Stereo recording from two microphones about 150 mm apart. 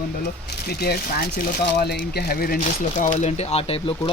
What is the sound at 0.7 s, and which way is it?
Speech, 90° left.